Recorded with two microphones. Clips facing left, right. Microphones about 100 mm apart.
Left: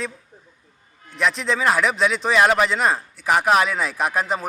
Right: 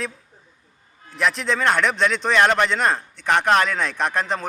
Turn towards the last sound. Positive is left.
turn(degrees=5)  # may be behind; listen again after turning